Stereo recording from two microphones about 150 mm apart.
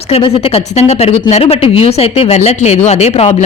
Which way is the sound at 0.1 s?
40° left (ahead or behind).